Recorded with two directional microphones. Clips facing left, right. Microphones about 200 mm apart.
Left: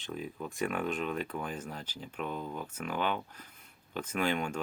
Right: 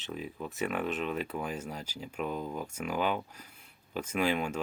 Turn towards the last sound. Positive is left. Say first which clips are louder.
# right 2 dB
turn(degrees=-5)  # may be behind; listen again after turning